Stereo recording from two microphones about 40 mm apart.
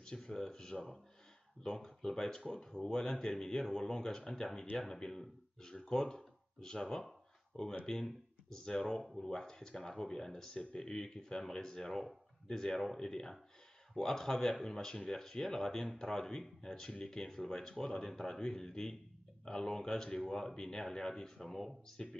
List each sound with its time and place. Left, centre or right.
0.0 s speech: centre